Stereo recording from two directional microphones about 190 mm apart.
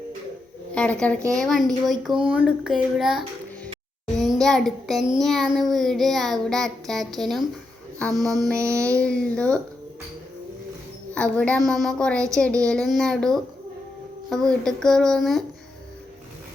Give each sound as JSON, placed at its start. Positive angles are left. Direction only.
{"t": 0.7, "sound": "speech", "side_deg": 5}
{"t": 1.3, "sound": "child singing", "side_deg": 0}
{"t": 4.4, "sound": "a child's voice", "side_deg": 0}
{"t": 5.2, "sound": "child singing", "side_deg": 0}
{"t": 8.5, "sound": "a sound", "side_deg": -15}
{"t": 9.0, "sound": "child singing", "side_deg": 5}
{"t": 11.1, "sound": "child singing", "side_deg": 5}